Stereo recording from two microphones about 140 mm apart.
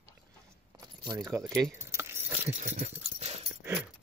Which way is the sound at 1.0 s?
25° right (ahead or behind).